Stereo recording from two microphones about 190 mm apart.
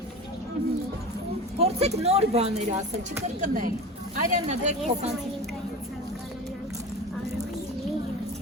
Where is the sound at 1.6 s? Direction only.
35° right (ahead or behind).